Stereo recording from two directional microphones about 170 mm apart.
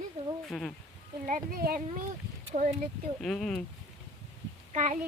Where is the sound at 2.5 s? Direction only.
40° right (ahead or behind).